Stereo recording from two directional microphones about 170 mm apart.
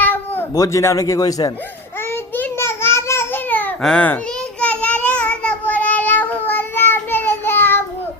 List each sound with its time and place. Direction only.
0.0 s speech: 10° left (ahead or behind)
2.0 s a sound: 15° left (ahead or behind)
4.6 s child singing: 10° left (ahead or behind)